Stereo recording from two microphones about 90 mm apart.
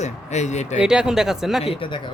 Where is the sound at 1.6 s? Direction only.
70° left (ahead or behind).